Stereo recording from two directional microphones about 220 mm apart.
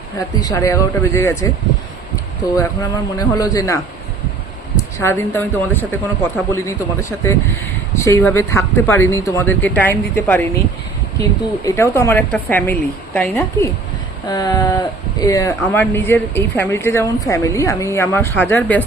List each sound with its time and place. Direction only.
0.4 s speech: 15° left (ahead or behind)
4.8 s speech: 15° left (ahead or behind)